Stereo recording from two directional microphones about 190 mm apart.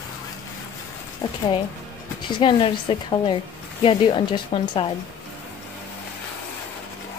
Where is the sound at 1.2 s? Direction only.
20° left (ahead or behind).